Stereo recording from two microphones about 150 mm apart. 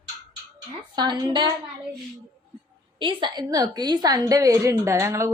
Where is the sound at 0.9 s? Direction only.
30° right (ahead or behind).